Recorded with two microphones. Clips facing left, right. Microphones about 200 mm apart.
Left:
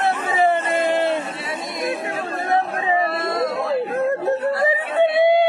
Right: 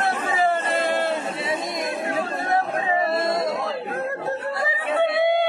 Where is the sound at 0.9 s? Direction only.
20° left (ahead or behind).